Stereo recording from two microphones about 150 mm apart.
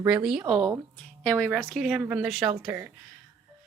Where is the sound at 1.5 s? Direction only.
5° left (ahead or behind).